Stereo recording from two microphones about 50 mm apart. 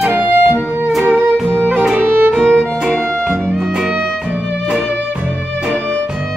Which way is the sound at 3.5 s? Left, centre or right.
Centre.